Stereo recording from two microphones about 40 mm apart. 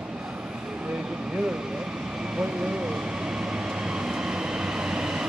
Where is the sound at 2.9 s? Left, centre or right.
Centre.